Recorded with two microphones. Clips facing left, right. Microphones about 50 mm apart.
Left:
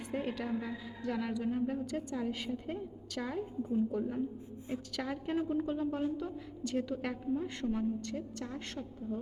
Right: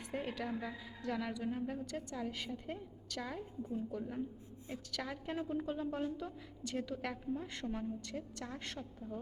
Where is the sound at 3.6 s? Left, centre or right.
Centre.